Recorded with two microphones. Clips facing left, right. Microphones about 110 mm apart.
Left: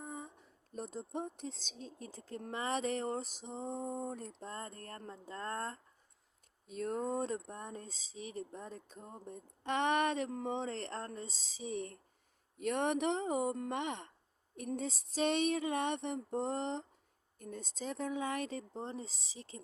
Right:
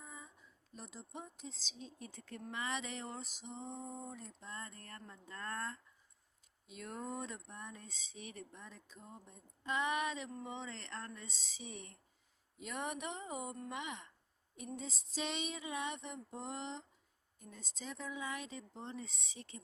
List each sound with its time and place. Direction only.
0.0 s a sound: 55° left (ahead or behind)
0.7 s speech: 45° left (ahead or behind)
4.4 s speech: 45° left (ahead or behind)
12.5 s speech: 55° left (ahead or behind)
13.7 s speech: 55° left (ahead or behind)
14.8 s a sound: 55° left (ahead or behind)
17.3 s speech: 55° left (ahead or behind); by 19.5 s 30° left (ahead or behind)